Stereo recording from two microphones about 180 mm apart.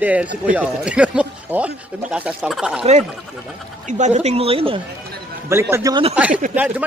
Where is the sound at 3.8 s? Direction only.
40° right (ahead or behind).